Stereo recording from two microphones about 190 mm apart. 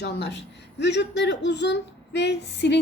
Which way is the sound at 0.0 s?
60° left (ahead or behind).